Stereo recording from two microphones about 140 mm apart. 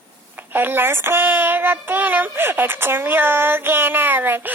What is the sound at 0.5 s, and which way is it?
Child singing, 15° right (ahead or behind).